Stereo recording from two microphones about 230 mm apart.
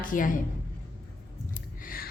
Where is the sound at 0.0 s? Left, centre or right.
Left.